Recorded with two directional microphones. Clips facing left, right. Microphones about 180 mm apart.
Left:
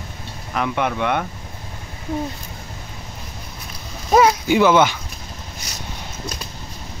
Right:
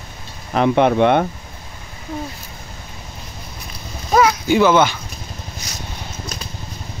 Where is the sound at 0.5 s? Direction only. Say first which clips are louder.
Right 8 dB; 30° right (ahead or behind).